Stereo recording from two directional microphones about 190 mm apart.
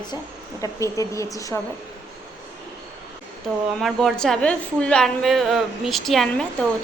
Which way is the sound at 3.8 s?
Centre (ahead or behind).